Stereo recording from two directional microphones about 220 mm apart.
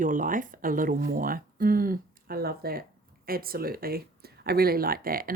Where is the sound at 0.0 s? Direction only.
35° right (ahead or behind).